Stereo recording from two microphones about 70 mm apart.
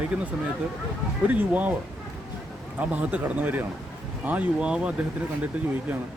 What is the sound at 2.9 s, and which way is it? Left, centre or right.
Speech, right.